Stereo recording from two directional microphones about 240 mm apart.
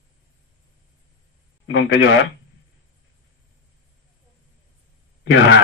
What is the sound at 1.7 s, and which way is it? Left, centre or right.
Speech, left.